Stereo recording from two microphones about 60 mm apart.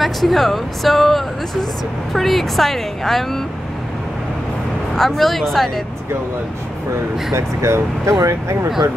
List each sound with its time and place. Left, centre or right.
0.0 s speech: centre
4.9 s speech: centre
7.3 s speech: right
8.1 s speech: right